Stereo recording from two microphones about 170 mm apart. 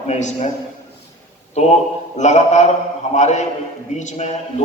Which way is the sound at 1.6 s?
40° left (ahead or behind).